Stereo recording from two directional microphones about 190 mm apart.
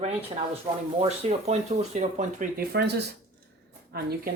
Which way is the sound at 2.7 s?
60° right (ahead or behind).